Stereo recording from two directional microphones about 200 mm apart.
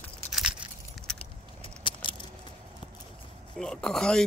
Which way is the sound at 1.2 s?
25° left (ahead or behind).